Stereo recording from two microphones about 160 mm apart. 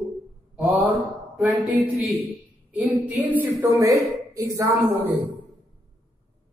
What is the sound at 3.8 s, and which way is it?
Speech, 20° right (ahead or behind).